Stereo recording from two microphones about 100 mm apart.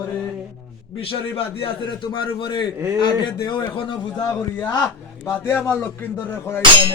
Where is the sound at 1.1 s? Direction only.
65° left (ahead or behind).